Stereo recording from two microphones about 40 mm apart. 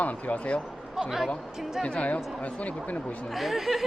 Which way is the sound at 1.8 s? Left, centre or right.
Left.